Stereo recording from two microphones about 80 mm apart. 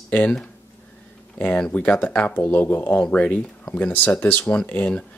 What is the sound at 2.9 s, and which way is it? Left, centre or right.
Speech, centre.